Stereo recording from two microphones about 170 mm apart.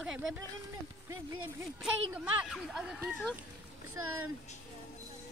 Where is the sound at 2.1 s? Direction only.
10° right (ahead or behind).